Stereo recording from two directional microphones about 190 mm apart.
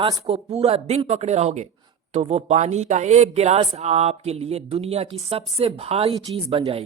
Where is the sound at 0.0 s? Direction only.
30° right (ahead or behind).